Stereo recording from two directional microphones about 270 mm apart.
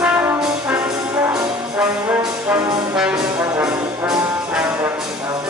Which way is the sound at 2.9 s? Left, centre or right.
Centre.